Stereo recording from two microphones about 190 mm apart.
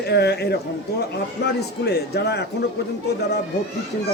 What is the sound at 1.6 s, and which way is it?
Speech, 60° left (ahead or behind).